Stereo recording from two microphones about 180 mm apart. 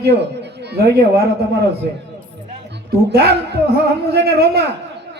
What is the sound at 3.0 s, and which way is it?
A man's voice, 65° right (ahead or behind).